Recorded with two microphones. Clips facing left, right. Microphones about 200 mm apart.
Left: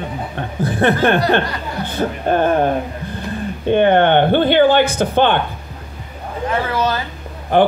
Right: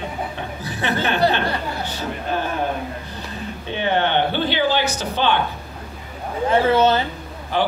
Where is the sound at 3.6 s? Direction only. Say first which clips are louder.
Left 9 dB; 55° left (ahead or behind).